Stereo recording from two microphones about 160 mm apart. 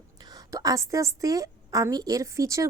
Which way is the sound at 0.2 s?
25° right (ahead or behind).